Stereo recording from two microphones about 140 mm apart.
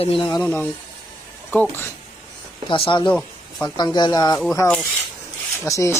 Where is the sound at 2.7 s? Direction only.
40° left (ahead or behind).